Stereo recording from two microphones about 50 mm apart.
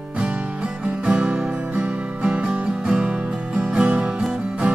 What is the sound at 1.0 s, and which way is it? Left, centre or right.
Music, right.